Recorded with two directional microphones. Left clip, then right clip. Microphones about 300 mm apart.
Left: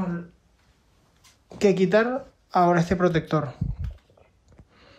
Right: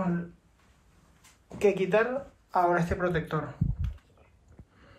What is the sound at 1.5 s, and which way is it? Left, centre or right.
Speech, left.